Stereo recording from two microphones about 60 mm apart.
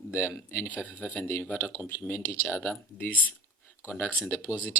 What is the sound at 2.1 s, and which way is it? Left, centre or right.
Speech, left.